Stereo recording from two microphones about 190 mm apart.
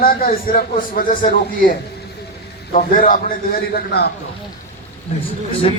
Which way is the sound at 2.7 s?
45° left (ahead or behind).